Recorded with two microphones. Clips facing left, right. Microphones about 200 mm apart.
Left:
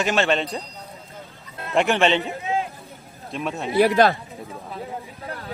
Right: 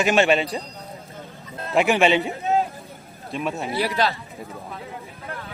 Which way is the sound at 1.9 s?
10° right (ahead or behind).